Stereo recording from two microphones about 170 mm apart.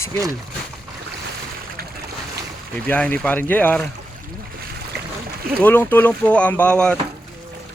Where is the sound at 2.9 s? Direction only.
10° left (ahead or behind).